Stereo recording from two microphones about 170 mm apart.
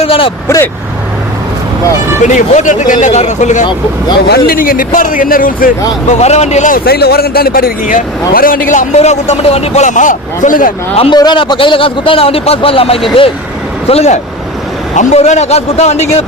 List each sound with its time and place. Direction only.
0.0 s a man's voice: 30° left (ahead or behind)
0.4 s speech: 15° left (ahead or behind)
2.6 s a man's voice: 50° left (ahead or behind)
4.3 s speech: 60° left (ahead or behind)
6.1 s a man's voice: 40° left (ahead or behind)
10.9 s a man's voice: 35° left (ahead or behind)